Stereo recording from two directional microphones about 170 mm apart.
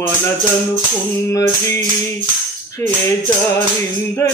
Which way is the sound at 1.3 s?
15° left (ahead or behind).